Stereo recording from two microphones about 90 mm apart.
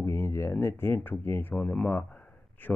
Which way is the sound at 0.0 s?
30° left (ahead or behind).